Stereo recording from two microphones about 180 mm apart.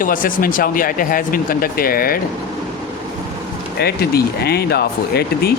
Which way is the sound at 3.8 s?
60° left (ahead or behind).